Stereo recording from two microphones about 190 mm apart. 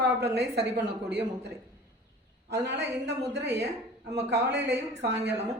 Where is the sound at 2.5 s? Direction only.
65° right (ahead or behind).